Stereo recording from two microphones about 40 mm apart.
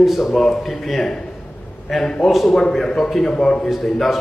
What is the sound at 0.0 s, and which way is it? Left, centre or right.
Speech, centre.